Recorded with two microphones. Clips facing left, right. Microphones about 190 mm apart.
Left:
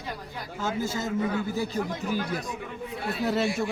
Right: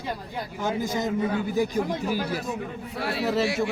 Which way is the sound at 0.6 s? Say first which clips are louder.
Right 3 dB; 15° right (ahead or behind).